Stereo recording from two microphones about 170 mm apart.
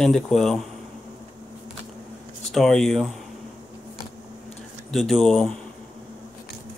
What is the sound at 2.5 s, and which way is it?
Speech, centre (ahead or behind).